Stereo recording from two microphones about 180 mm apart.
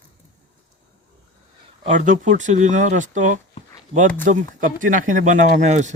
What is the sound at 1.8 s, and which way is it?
Speech, 40° right (ahead or behind).